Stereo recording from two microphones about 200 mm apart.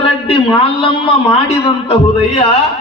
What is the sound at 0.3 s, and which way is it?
Speech, 25° left (ahead or behind).